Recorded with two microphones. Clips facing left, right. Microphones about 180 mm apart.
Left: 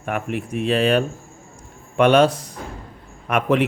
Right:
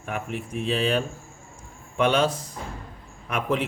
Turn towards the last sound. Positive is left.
turn(degrees=70)  # may be behind; listen again after turning